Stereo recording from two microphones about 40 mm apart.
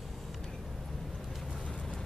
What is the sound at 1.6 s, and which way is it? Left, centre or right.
Vehicle, left.